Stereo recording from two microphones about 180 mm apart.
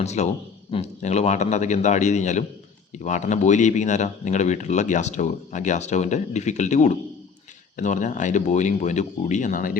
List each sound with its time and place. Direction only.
0.0 s speech: 40° left (ahead or behind)